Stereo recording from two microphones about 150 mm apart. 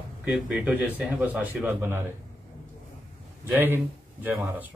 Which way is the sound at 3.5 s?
15° right (ahead or behind).